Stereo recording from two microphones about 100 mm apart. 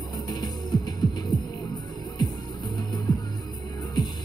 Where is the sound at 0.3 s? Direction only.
40° left (ahead or behind).